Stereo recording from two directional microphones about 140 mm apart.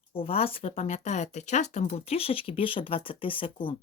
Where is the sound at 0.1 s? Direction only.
40° left (ahead or behind).